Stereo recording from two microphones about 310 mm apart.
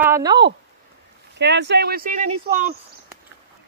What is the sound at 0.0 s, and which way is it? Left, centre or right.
Speech, centre.